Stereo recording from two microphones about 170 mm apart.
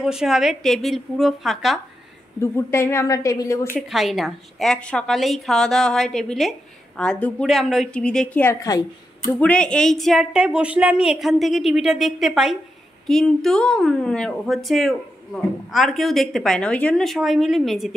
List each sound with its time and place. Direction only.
0.0 s a woman's voice: 5° right (ahead or behind)
2.4 s a woman's voice: 15° left (ahead or behind)
3.9 s a woman's voice: centre (ahead or behind); by 8.8 s 20° left (ahead or behind)
9.4 s a woman's voice: 5° left (ahead or behind)